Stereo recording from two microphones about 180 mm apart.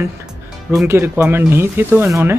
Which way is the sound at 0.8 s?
15° right (ahead or behind).